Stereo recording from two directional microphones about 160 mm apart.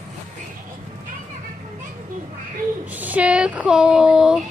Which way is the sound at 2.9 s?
10° right (ahead or behind).